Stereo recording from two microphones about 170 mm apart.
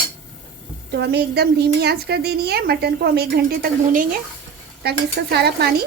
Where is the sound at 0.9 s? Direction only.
75° right (ahead or behind).